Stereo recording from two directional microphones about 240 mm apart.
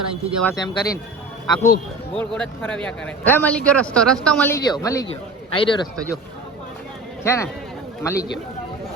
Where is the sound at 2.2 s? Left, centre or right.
Centre.